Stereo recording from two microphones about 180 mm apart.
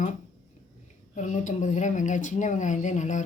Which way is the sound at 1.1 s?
45° left (ahead or behind).